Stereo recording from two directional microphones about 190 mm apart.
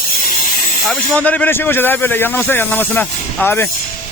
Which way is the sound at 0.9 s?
5° left (ahead or behind).